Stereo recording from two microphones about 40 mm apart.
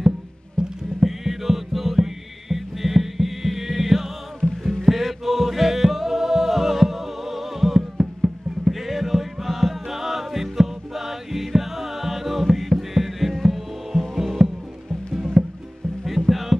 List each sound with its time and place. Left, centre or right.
0.6 s music: centre
1.0 s music: centre
4.4 s music: centre
4.8 s music: centre
15.4 s music: centre
16.3 s music: centre